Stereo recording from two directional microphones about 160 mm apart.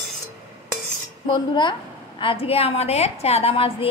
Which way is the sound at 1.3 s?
30° left (ahead or behind).